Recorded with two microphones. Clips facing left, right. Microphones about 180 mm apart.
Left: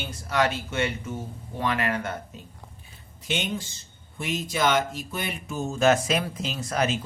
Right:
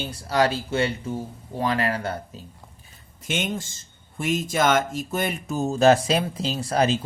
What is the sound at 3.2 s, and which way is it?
A man's voice, 50° right (ahead or behind).